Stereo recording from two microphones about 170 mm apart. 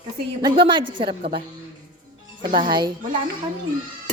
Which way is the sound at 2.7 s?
25° right (ahead or behind).